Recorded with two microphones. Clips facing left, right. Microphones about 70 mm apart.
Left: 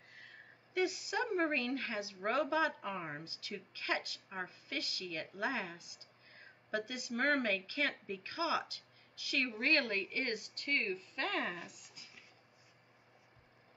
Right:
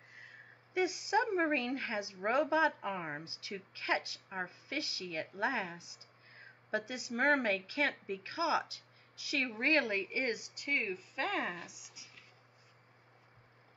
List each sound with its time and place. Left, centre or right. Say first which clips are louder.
0.1 s a woman's voice: right 1 dB; centre